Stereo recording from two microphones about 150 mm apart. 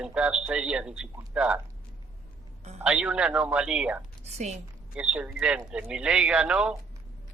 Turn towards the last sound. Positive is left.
turn(degrees=-5)  # may be behind; listen again after turning